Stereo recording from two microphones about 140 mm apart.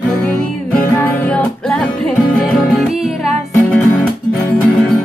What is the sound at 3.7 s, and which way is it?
Music, 10° left (ahead or behind).